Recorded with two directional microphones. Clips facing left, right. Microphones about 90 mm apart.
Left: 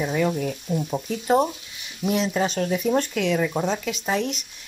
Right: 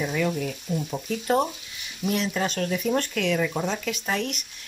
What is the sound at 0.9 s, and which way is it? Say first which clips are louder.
Speech: left 3 dB; 15° left (ahead or behind).